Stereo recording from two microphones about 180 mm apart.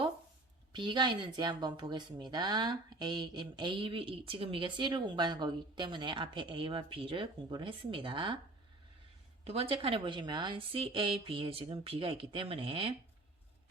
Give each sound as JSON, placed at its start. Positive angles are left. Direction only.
{"t": 0.7, "sound": "speech", "side_deg": -25}
{"t": 9.4, "sound": "a woman's voice", "side_deg": -35}